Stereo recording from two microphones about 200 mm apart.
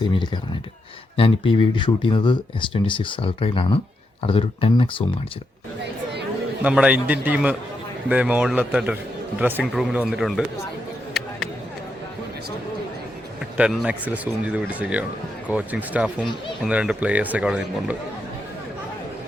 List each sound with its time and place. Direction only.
0.0 s speech: 25° left (ahead or behind)
6.6 s speech: 5° right (ahead or behind)
13.6 s speech: 5° right (ahead or behind)